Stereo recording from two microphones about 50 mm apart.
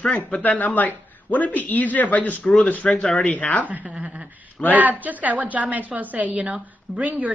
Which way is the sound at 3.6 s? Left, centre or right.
Right.